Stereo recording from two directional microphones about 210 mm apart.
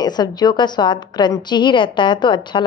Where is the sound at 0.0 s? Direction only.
20° left (ahead or behind).